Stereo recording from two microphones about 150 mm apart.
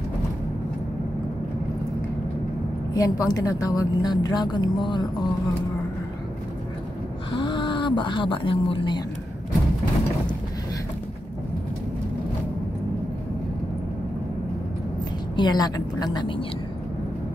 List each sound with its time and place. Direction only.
2.9 s a woman's voice: 25° left (ahead or behind)
7.3 s speech: 35° left (ahead or behind)
15.3 s a woman's voice: 30° left (ahead or behind)